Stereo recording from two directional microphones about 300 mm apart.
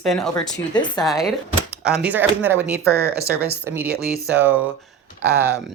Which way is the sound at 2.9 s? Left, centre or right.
Right.